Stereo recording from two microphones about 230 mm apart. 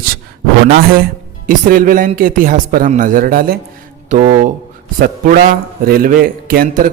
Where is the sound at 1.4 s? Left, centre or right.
Right.